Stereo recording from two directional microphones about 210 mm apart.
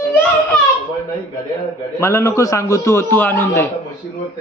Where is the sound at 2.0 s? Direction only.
15° left (ahead or behind).